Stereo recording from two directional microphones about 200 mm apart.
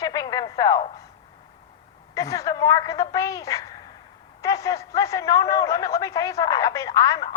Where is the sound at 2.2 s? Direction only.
15° left (ahead or behind).